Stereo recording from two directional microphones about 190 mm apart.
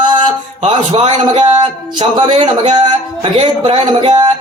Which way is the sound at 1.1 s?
30° right (ahead or behind).